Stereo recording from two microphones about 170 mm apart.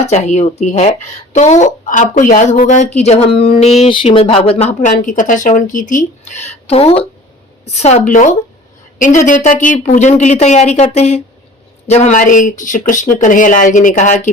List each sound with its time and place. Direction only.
0.1 s a woman's voice: 40° left (ahead or behind)